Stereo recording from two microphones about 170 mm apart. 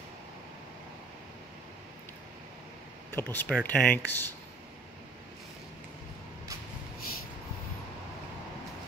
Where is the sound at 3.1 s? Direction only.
15° left (ahead or behind).